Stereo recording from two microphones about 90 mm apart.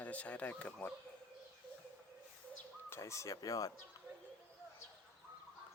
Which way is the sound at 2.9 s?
35° left (ahead or behind).